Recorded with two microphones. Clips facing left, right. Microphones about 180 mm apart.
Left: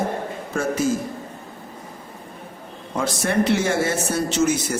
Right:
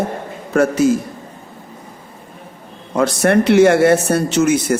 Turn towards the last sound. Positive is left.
turn(degrees=-60)  # may be behind; listen again after turning